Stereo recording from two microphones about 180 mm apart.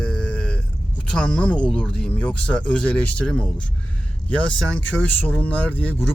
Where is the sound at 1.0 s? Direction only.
5° left (ahead or behind).